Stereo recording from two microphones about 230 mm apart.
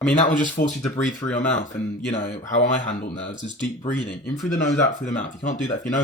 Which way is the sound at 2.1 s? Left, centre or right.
Left.